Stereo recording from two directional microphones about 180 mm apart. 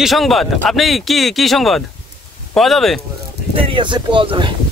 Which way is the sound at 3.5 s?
30° right (ahead or behind).